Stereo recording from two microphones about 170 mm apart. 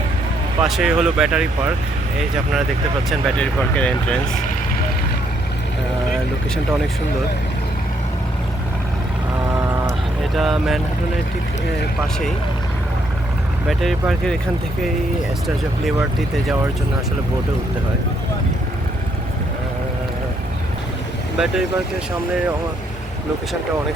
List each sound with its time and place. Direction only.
0.6 s speech: 5° right (ahead or behind)
3.1 s speech: 5° left (ahead or behind)
10.3 s speech: centre (ahead or behind)
16.0 s speech: centre (ahead or behind)
21.3 s speech: 5° right (ahead or behind)